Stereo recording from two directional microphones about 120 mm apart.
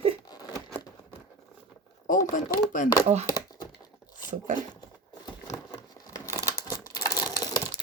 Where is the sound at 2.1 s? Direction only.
90° left.